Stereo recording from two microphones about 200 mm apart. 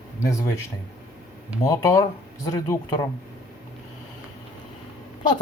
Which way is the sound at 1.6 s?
15° left (ahead or behind).